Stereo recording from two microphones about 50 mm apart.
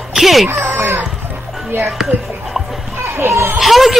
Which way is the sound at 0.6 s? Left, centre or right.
Right.